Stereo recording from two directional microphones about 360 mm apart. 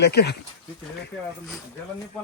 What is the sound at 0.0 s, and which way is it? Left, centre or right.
Speech, left.